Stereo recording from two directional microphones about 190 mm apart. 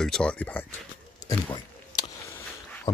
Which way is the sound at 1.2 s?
20° left (ahead or behind).